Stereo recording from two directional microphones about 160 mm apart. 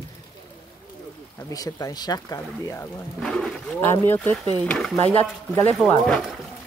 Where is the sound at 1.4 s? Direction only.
20° left (ahead or behind).